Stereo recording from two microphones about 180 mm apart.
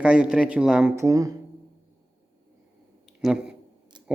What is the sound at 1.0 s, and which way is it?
Speech, 15° right (ahead or behind).